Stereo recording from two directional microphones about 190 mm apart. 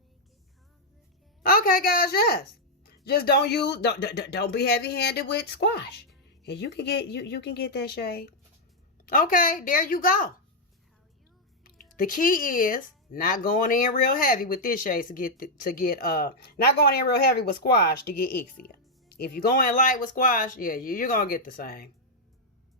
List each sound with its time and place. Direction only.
1.4 s a woman's voice: 50° left (ahead or behind)
11.9 s speech: 50° left (ahead or behind)
18.7 s music: 55° left (ahead or behind)
19.4 s speech: 50° left (ahead or behind)